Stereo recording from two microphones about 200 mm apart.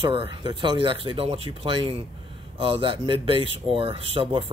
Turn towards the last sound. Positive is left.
turn(degrees=-25)  # may be behind; listen again after turning